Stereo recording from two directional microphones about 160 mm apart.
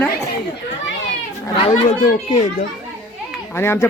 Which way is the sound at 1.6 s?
50° left (ahead or behind).